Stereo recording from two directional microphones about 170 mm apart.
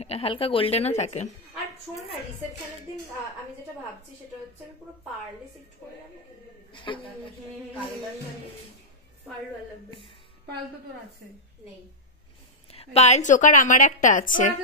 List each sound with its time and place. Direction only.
0.0 s a woman's voice: 35° left (ahead or behind)
6.7 s a man's voice: 30° left (ahead or behind)
12.7 s a woman's voice: 40° left (ahead or behind)